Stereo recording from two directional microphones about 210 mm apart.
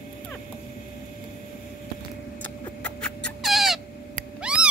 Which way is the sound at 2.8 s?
5° left (ahead or behind).